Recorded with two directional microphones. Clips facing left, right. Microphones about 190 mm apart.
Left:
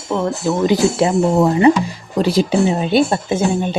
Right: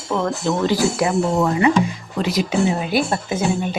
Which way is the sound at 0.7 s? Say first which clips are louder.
Left 4 dB; 25° left (ahead or behind).